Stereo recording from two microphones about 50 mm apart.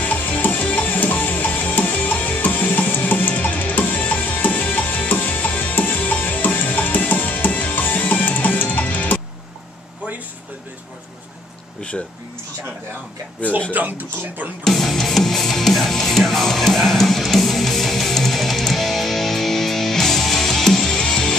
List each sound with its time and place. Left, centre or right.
0.0 s music: left
13.7 s speech: right
14.6 s music: centre